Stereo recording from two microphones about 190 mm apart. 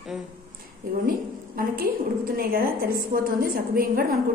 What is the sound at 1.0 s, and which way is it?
A woman's voice, 50° right (ahead or behind).